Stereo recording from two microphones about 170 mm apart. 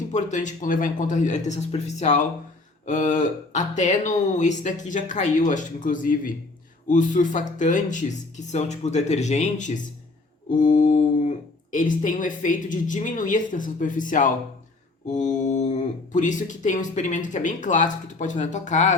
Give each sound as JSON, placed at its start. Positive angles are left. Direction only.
{"t": 0.1, "sound": "speech", "side_deg": 45}